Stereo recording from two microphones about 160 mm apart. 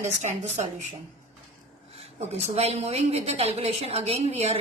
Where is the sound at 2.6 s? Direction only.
40° right (ahead or behind).